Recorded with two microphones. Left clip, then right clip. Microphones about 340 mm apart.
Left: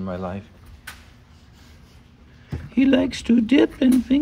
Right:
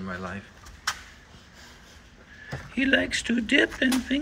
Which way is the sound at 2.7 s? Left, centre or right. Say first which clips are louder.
Left 4 dB; centre.